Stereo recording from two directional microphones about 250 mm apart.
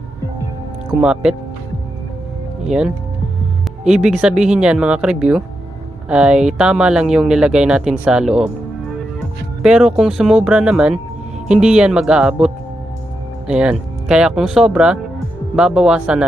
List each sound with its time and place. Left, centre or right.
1.0 s speech: centre
2.6 s speech: centre
9.6 s speech: centre